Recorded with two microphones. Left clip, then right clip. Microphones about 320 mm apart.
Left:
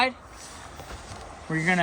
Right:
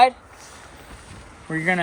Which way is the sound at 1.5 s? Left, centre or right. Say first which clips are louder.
Right 3 dB; centre.